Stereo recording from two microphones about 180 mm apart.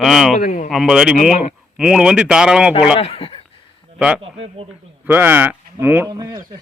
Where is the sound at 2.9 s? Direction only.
35° left (ahead or behind).